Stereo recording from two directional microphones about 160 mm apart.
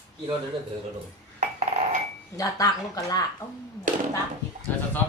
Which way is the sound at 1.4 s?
50° right (ahead or behind).